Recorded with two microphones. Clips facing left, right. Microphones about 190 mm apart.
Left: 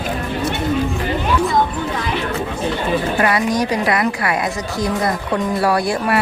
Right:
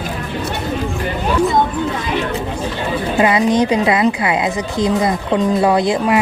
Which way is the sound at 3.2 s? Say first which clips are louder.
Right 8 dB; 20° right (ahead or behind).